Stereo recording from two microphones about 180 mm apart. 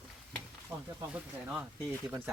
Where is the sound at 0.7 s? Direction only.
5° right (ahead or behind).